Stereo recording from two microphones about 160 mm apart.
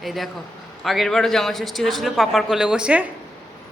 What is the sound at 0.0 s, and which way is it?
A man's voice, centre (ahead or behind).